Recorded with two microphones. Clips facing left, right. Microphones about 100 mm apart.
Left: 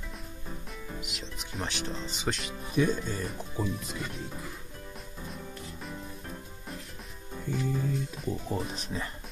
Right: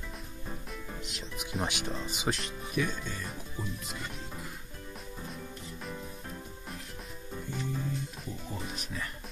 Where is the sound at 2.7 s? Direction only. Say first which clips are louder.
Left 6 dB; 35° left (ahead or behind).